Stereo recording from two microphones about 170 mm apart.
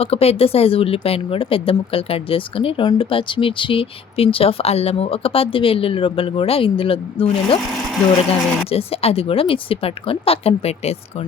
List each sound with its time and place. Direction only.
0.0 s speech: 35° left (ahead or behind)